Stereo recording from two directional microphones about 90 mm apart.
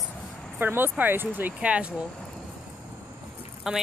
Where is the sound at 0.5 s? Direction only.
25° right (ahead or behind).